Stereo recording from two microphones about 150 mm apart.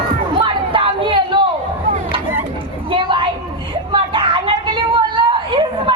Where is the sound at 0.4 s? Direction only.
35° right (ahead or behind).